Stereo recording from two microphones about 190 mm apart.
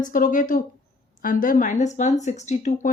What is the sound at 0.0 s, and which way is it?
Speech, 45° left (ahead or behind).